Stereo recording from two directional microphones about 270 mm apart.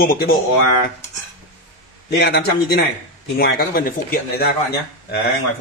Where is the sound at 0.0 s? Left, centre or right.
Left.